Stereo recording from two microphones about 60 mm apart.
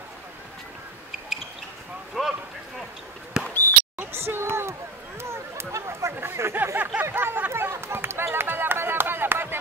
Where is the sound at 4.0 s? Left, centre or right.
Right.